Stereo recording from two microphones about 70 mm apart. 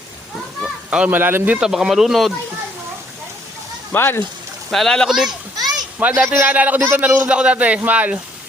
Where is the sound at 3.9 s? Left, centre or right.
Left.